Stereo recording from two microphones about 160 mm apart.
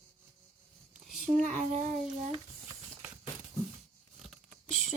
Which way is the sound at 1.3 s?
55° right (ahead or behind).